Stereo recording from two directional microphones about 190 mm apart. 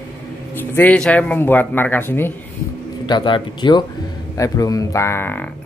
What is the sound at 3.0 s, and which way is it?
Speech, 25° left (ahead or behind).